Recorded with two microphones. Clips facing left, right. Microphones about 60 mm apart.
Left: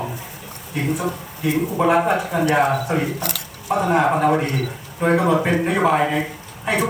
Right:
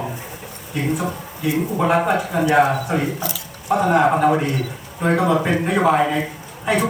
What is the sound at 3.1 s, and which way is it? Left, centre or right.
Speech, left.